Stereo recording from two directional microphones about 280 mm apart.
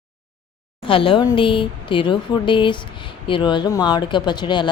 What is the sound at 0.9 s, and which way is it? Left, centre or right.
Speech, centre.